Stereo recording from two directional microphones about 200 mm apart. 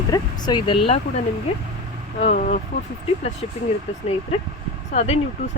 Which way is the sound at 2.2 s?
40° left (ahead or behind).